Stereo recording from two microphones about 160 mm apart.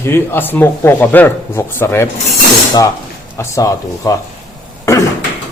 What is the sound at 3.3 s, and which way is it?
Speech, 20° left (ahead or behind).